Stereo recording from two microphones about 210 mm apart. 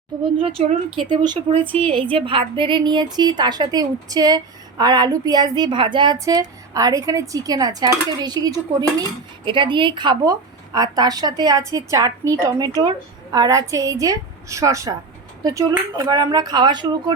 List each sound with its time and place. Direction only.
0.3 s a woman's voice: 25° right (ahead or behind)